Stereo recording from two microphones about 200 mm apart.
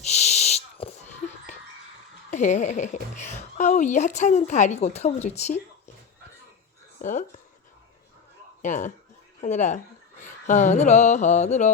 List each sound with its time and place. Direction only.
0.0 s a sound: 35° left (ahead or behind)
2.3 s speech: 35° left (ahead or behind)
7.0 s speech: 40° left (ahead or behind)
8.6 s speech: 40° left (ahead or behind)